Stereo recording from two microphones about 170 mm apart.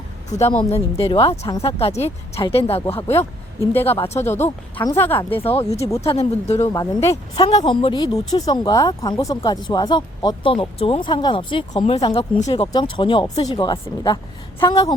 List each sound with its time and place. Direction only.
0.6 s speech: 35° left (ahead or behind)
3.8 s speech: 15° left (ahead or behind)
4.0 s speech: 40° left (ahead or behind)
4.4 s speech: 15° left (ahead or behind)
5.4 s speech: 35° left (ahead or behind)
6.7 s speech: 20° left (ahead or behind)
7.3 s speech: 30° left (ahead or behind)